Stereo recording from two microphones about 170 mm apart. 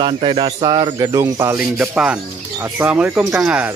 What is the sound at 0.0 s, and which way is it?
Speech, 30° right (ahead or behind).